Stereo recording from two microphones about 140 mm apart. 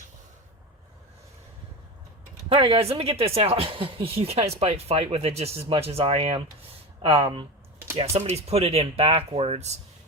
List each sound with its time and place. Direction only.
2.5 s speech: 40° right (ahead or behind)